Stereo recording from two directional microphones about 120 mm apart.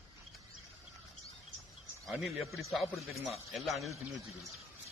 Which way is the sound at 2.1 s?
Centre (ahead or behind).